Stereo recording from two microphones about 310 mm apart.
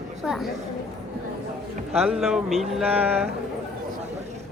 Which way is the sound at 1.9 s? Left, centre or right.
Centre.